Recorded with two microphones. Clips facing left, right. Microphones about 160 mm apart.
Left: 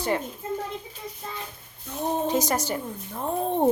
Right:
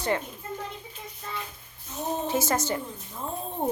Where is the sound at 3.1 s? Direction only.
65° left (ahead or behind).